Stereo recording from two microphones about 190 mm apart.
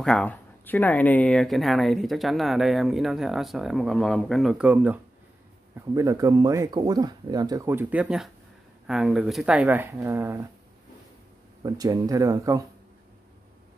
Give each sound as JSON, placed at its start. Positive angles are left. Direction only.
{"t": 0.0, "sound": "speech", "side_deg": 5}
{"t": 11.6, "sound": "speech", "side_deg": -20}